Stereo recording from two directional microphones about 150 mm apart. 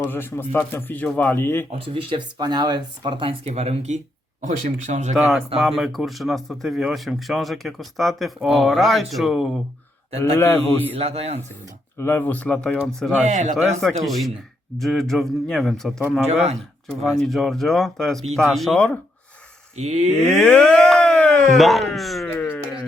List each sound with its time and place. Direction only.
0.1 s speech: 15° left (ahead or behind)
1.9 s speech: 35° right (ahead or behind); by 5.1 s 50° right (ahead or behind)
5.1 s speech: centre (ahead or behind)
10.3 s speech: 15° left (ahead or behind)
10.9 s speech: 40° right (ahead or behind)
11.9 s speech: 15° left (ahead or behind)
13.2 s speech: 55° right (ahead or behind)
14.0 s speech: centre (ahead or behind)
16.3 s speech: 45° right (ahead or behind)
17.0 s speech: centre (ahead or behind)
19.7 s speech: 50° right (ahead or behind)
20.3 s a sound: 10° left (ahead or behind)